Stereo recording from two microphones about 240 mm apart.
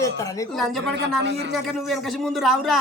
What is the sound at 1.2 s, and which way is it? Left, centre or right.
Speech, right.